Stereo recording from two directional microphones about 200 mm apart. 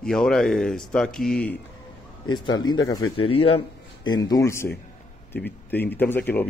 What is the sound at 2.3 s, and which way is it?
A man's voice, 20° left (ahead or behind).